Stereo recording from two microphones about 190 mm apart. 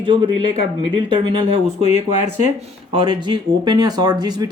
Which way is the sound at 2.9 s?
25° right (ahead or behind).